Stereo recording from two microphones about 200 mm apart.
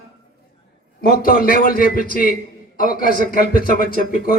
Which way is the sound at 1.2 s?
45° left (ahead or behind).